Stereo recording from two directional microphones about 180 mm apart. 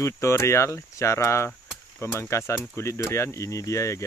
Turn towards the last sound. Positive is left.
turn(degrees=15)  # may be behind; listen again after turning